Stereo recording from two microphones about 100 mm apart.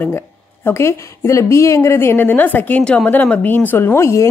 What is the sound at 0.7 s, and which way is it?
A woman's voice, 30° left (ahead or behind).